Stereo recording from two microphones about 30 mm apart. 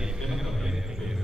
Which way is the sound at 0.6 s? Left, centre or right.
Centre.